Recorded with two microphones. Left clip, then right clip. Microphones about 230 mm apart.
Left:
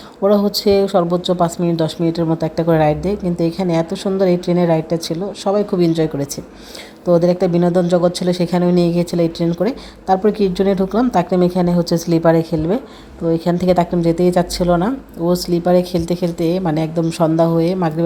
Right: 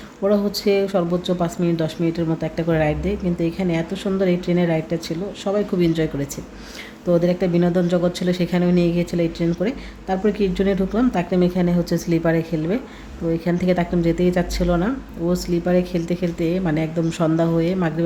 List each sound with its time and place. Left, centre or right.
0.2 s speech: centre